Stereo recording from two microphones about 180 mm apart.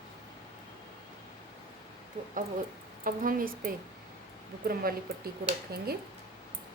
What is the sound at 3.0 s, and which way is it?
A woman's voice, 50° right (ahead or behind).